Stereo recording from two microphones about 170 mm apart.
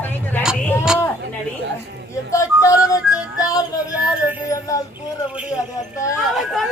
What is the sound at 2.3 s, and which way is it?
Music, 20° left (ahead or behind).